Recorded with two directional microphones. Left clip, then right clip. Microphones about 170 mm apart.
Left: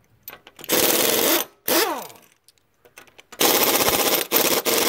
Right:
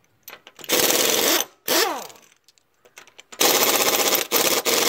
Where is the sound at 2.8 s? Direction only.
15° left (ahead or behind).